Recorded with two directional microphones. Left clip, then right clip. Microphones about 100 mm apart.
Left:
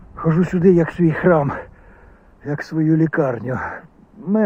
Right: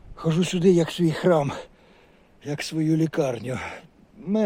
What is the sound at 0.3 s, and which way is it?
Speech, 15° right (ahead or behind).